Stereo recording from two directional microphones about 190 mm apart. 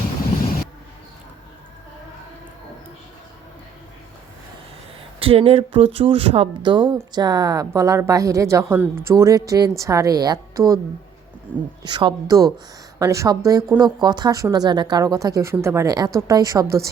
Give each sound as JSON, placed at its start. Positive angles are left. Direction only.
{"t": 5.2, "sound": "a woman's voice", "side_deg": -30}
{"t": 11.8, "sound": "a woman's voice", "side_deg": -25}